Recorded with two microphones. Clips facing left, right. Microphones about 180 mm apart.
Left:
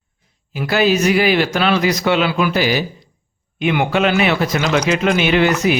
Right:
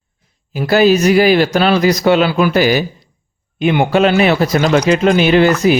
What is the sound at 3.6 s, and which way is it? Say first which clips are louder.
Speech: right 4 dB; 35° right (ahead or behind).